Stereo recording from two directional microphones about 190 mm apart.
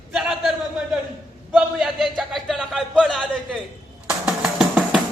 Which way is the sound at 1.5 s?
Centre (ahead or behind).